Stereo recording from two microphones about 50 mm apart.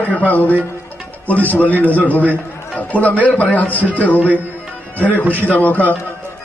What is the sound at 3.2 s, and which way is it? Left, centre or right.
Speech, left.